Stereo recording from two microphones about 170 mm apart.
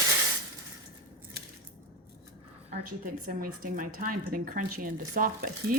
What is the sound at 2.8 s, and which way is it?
Speech, 55° right (ahead or behind).